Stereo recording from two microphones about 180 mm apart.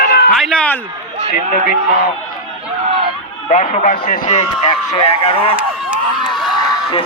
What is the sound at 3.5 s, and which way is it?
A man's voice, 40° left (ahead or behind).